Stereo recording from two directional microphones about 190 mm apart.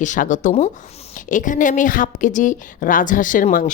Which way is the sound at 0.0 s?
40° left (ahead or behind).